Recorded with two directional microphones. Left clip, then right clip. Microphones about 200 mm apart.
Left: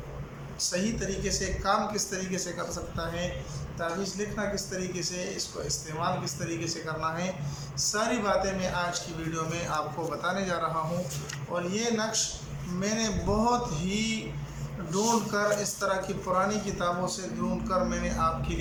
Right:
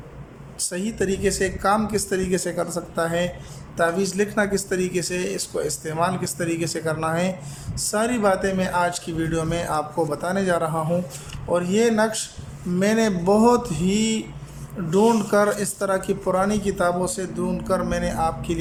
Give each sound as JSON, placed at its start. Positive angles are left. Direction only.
{"t": 0.7, "sound": "a man's voice", "side_deg": -40}